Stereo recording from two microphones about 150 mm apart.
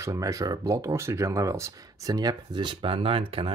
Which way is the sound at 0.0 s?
20° right (ahead or behind).